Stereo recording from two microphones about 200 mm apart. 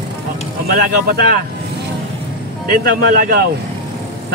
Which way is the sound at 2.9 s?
50° right (ahead or behind).